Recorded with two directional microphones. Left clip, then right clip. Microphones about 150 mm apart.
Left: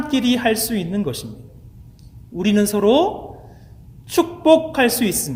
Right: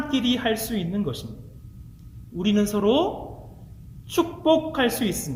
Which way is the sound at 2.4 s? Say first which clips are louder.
Left 5 dB; 30° left (ahead or behind).